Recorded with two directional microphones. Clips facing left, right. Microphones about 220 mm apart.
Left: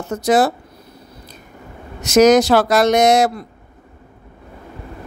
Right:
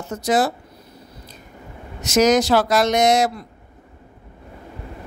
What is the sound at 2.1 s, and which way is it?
A woman's voice, 65° left (ahead or behind).